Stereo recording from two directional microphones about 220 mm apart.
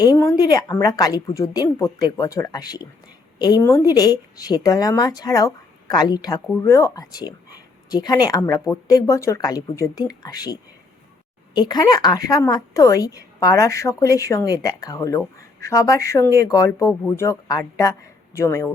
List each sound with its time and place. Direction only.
0.0 s a woman's voice: 15° left (ahead or behind)